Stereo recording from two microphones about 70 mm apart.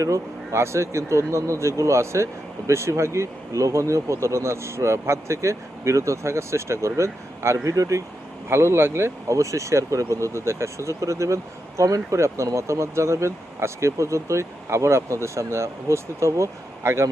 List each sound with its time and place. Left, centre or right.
0.0 s speech: right
8.4 s speech: right